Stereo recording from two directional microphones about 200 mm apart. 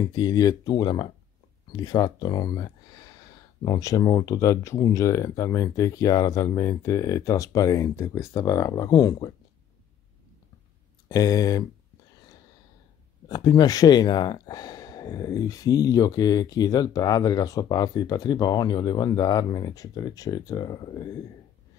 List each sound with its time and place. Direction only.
0.0 s speech: 20° left (ahead or behind)
11.1 s speech: 20° left (ahead or behind)
13.3 s speech: 20° left (ahead or behind)